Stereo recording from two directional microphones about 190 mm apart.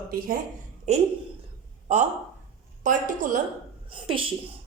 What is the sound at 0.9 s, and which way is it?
A woman's voice, 35° right (ahead or behind).